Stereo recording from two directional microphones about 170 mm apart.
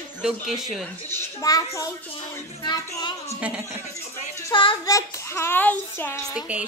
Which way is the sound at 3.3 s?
10° right (ahead or behind).